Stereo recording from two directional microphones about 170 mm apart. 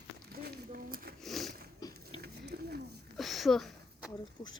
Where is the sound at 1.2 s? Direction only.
Centre (ahead or behind).